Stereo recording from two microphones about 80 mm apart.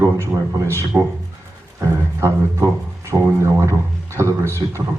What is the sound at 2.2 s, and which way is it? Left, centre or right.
Speech, right.